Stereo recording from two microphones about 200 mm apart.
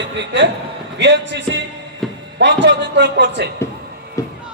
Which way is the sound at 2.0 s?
Centre (ahead or behind).